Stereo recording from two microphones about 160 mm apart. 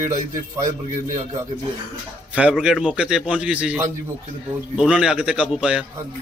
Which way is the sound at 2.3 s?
10° right (ahead or behind).